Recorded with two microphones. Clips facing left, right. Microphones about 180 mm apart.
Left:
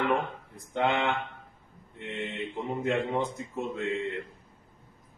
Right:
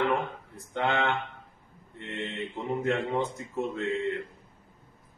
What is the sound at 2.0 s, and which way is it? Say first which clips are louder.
Mantra: even; 15° left (ahead or behind).